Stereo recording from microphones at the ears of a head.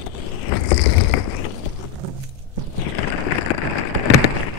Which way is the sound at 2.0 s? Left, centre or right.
Right.